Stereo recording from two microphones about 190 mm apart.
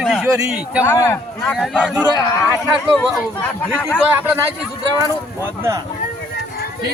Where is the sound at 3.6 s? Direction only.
10° left (ahead or behind).